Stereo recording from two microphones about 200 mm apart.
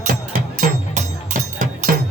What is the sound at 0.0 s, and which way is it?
Music, 45° right (ahead or behind).